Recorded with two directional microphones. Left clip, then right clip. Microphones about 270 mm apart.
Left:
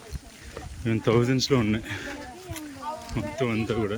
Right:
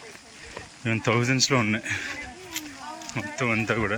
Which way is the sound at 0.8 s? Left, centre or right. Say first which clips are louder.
Left 1 dB; centre.